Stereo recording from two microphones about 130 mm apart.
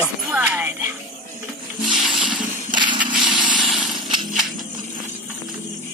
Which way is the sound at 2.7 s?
35° right (ahead or behind).